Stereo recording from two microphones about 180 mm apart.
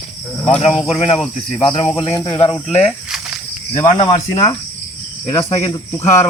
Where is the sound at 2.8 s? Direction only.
5° right (ahead or behind).